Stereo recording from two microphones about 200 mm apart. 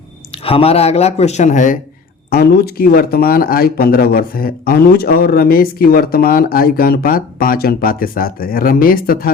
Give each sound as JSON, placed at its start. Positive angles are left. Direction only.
{"t": 0.3, "sound": "speech", "side_deg": 30}
{"t": 2.3, "sound": "speech", "side_deg": 50}